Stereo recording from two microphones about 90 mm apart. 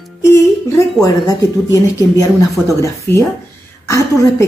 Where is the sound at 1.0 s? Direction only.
40° left (ahead or behind).